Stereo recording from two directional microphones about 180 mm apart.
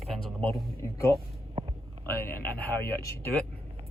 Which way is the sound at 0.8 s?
15° left (ahead or behind).